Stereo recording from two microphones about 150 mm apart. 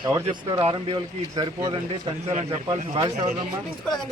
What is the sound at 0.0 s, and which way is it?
Speech, 30° right (ahead or behind).